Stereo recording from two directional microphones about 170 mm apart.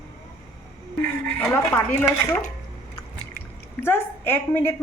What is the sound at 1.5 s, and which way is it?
Speech, 15° left (ahead or behind).